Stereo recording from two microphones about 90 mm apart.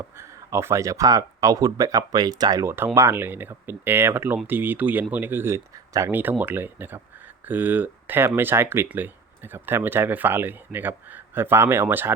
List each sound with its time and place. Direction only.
0.0 s speech: 30° right (ahead or behind); by 2.6 s 45° right (ahead or behind)
2.6 s speech: 25° right (ahead or behind)